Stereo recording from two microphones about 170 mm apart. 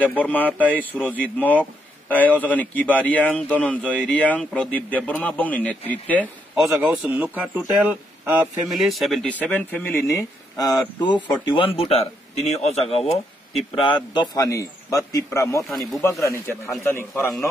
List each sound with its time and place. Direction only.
0.0 s speech: 10° left (ahead or behind)
6.5 s a man's voice: 5° right (ahead or behind); by 17.5 s 15° left (ahead or behind)